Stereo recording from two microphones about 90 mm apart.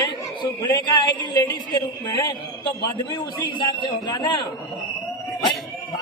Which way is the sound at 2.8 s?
50° left (ahead or behind).